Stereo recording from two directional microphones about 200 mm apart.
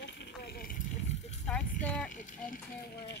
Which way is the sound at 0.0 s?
60° left (ahead or behind).